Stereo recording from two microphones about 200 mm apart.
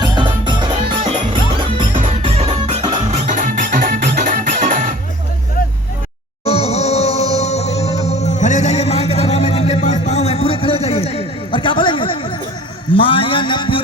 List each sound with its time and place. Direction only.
0.0 s music: 25° right (ahead or behind)
1.9 s music: 35° right (ahead or behind)
3.4 s music: 40° right (ahead or behind)
6.4 s music: 30° left (ahead or behind)
12.9 s a sound: 25° left (ahead or behind)